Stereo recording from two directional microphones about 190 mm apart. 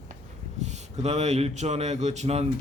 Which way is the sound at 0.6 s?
35° right (ahead or behind).